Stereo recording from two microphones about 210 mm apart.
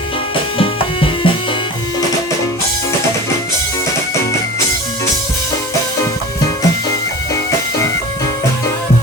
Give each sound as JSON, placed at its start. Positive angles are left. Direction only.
{"t": 0.6, "sound": "music", "side_deg": 25}